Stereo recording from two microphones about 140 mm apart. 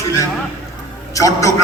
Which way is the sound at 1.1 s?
25° left (ahead or behind).